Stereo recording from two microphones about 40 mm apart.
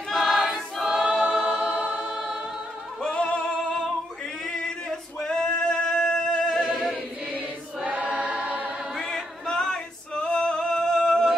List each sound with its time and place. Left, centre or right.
0.1 s choir: centre
0.4 s choir: centre
1.6 s choir: right
3.0 s music: left
4.8 s male singing: centre
6.4 s a sound: centre
7.3 s choir: right
8.9 s male singing: centre